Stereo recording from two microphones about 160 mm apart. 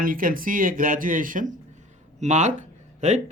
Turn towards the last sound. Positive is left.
turn(degrees=-45)  # may be behind; listen again after turning